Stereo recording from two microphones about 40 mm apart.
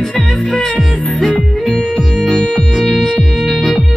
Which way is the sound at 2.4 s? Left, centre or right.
Left.